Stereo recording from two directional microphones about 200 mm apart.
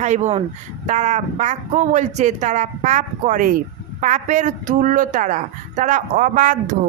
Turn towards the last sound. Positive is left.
turn(degrees=-40)  # may be behind; listen again after turning